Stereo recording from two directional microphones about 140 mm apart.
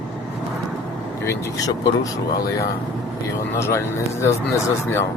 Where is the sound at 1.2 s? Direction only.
25° left (ahead or behind).